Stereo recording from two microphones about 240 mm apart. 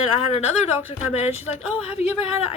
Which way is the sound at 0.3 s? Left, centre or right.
Left.